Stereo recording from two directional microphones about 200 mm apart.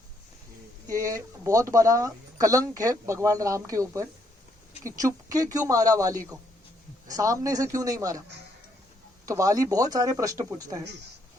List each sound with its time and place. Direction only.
0.9 s speech: 15° right (ahead or behind)
9.2 s speech: 15° right (ahead or behind)